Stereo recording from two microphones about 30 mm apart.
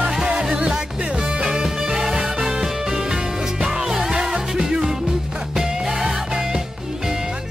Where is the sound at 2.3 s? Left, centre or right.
Right.